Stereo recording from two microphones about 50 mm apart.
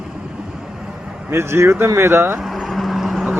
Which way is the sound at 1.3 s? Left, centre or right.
Right.